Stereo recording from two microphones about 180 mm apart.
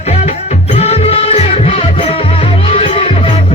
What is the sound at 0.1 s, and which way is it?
Music, 35° left (ahead or behind).